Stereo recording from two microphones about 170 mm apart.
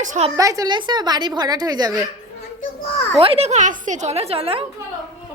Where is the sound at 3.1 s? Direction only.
35° right (ahead or behind).